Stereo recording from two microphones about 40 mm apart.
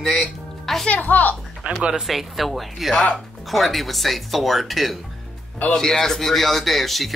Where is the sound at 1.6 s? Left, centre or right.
Right.